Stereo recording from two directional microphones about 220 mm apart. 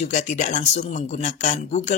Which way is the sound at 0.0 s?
30° left (ahead or behind).